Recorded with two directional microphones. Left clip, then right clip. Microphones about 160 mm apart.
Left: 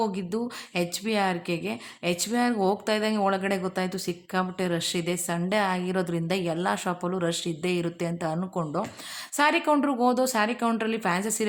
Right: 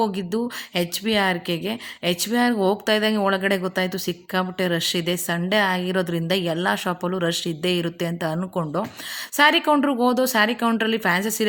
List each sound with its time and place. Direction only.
0.0 s a woman's voice: 15° right (ahead or behind)